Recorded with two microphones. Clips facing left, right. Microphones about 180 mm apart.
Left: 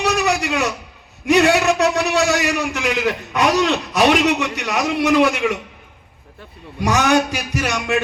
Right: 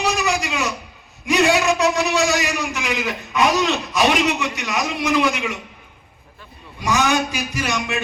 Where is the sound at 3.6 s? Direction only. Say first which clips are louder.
Left 3 dB; 55° left (ahead or behind).